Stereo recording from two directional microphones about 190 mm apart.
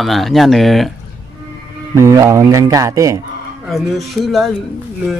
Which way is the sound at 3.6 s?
Centre (ahead or behind).